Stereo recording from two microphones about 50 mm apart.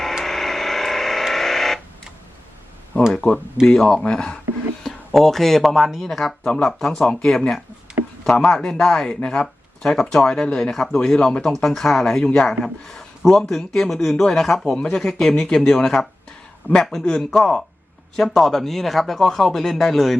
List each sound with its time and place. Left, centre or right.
0.3 s a sound: centre
3.2 s speech: centre
4.8 s a man's voice: centre
14.8 s speech: centre
15.0 s speech: centre
16.7 s speech: right
17.2 s a man's voice: centre